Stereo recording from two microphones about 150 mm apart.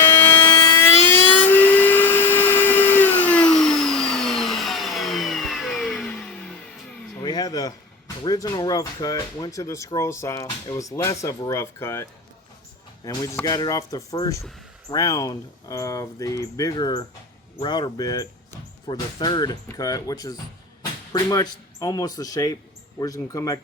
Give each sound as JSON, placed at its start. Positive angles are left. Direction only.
{"t": 0.3, "sound": "vehicle", "side_deg": 15}
{"t": 7.2, "sound": "a sound", "side_deg": 25}
{"t": 8.2, "sound": "speech", "side_deg": 25}
{"t": 13.1, "sound": "speech", "side_deg": 25}